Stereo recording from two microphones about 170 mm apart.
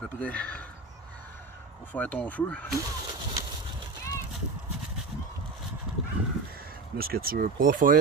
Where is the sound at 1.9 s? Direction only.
10° left (ahead or behind).